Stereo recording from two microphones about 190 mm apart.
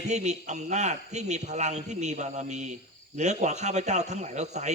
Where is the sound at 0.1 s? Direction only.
40° right (ahead or behind).